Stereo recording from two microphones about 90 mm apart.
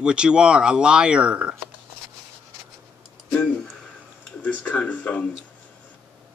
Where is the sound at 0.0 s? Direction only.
10° right (ahead or behind).